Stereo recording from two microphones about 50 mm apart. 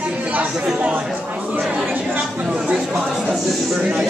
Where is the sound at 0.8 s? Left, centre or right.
Right.